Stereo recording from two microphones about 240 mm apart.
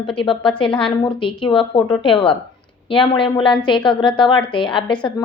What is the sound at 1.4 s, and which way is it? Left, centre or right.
A woman's voice, left.